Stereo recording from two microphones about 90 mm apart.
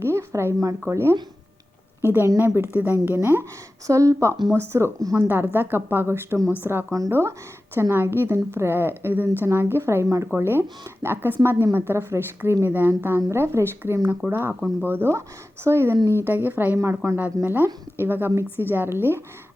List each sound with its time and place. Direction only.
0.0 s a woman's voice: 30° right (ahead or behind)
3.8 s speech: 35° right (ahead or behind)
5.3 s speech: 25° right (ahead or behind)